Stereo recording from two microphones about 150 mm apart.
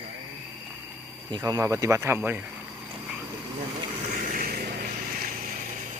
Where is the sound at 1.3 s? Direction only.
25° right (ahead or behind).